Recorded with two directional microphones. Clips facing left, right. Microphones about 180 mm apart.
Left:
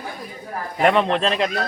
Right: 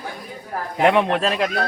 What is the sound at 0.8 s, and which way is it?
Speech, 10° right (ahead or behind).